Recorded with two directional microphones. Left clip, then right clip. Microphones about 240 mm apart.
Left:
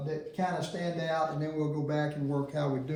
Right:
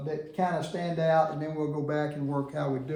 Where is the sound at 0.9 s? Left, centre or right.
Right.